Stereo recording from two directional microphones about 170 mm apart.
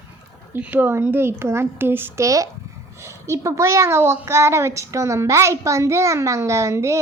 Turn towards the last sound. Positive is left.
turn(degrees=-15)  # may be behind; listen again after turning